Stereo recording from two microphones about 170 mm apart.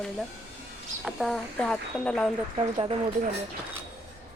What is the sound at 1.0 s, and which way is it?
Speech, centre (ahead or behind).